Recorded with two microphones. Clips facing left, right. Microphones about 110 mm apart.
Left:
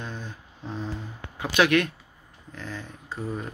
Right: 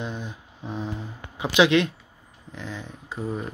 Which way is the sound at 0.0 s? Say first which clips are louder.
Right 4 dB; 15° right (ahead or behind).